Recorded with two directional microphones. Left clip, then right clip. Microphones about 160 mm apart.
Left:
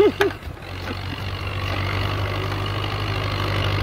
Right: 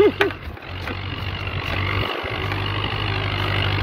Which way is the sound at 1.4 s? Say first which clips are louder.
Right 2 dB; 45° left (ahead or behind).